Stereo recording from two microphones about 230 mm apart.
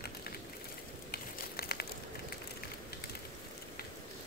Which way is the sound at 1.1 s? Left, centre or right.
Left.